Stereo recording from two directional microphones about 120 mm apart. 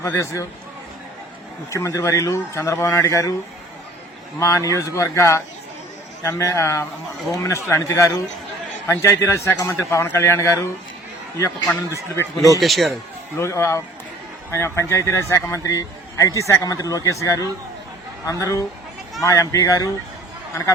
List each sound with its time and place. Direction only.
0.0 s a man's voice: 25° left (ahead or behind)
1.7 s a man's voice: 25° left (ahead or behind)
4.4 s a man's voice: 25° left (ahead or behind)
12.1 s a man's voice: 30° left (ahead or behind)
12.5 s speech: centre (ahead or behind)
13.3 s a man's voice: 25° left (ahead or behind)